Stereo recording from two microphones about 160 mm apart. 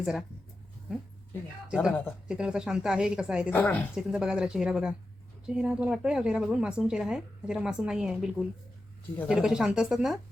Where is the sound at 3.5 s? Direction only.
10° left (ahead or behind).